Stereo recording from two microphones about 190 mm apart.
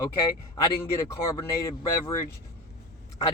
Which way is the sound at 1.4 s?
15° left (ahead or behind).